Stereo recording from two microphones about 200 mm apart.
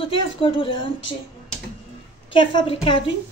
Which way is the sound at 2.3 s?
25° left (ahead or behind).